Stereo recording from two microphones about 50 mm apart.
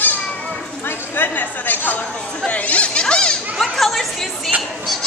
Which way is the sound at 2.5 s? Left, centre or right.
Left.